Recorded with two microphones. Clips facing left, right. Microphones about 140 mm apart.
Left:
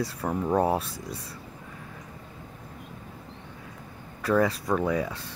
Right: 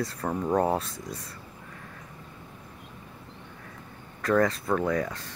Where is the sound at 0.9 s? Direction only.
30° left (ahead or behind).